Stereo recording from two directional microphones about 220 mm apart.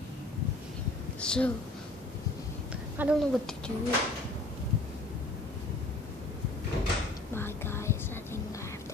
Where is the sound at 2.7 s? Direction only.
5° right (ahead or behind).